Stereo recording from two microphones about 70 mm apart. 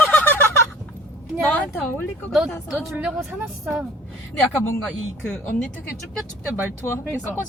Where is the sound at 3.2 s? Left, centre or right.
Centre.